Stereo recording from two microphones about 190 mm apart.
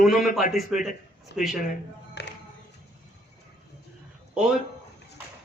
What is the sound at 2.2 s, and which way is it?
Music, 60° left (ahead or behind).